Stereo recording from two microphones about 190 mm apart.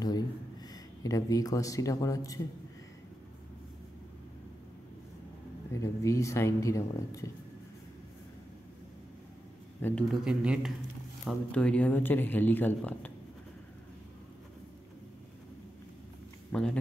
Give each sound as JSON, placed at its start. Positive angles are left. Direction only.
{"t": 1.0, "sound": "speech", "side_deg": 20}
{"t": 5.7, "sound": "speech", "side_deg": 15}
{"t": 9.8, "sound": "speech", "side_deg": 10}
{"t": 10.2, "sound": "speech", "side_deg": -5}
{"t": 11.2, "sound": "speech", "side_deg": 5}
{"t": 16.5, "sound": "speech", "side_deg": 10}